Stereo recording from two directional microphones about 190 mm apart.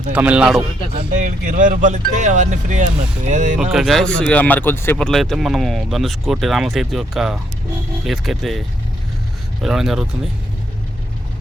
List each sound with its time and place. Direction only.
0.1 s speech: 5° right (ahead or behind)
1.2 s speech: 40° right (ahead or behind)
3.6 s speech: centre (ahead or behind)
9.6 s speech: centre (ahead or behind)